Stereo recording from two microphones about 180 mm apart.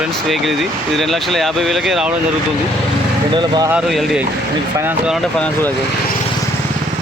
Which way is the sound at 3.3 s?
25° right (ahead or behind).